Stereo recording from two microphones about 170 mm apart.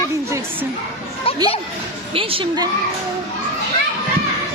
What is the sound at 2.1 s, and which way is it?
Speech, 30° right (ahead or behind).